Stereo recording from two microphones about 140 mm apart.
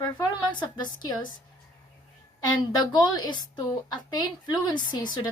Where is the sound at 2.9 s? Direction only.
30° left (ahead or behind).